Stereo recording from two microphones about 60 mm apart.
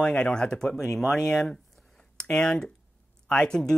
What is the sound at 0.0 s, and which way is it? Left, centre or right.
Speech, centre.